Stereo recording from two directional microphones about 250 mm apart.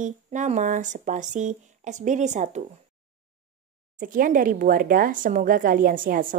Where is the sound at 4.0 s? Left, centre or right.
Right.